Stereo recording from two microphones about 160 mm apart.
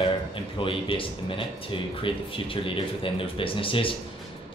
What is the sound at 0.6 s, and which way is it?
Speech, 35° left (ahead or behind).